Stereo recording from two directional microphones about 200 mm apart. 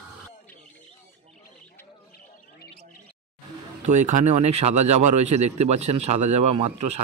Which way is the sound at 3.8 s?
35° right (ahead or behind).